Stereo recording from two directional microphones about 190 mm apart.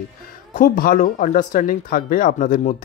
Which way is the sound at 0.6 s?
45° left (ahead or behind).